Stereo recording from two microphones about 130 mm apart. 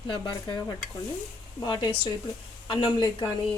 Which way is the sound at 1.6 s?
35° left (ahead or behind).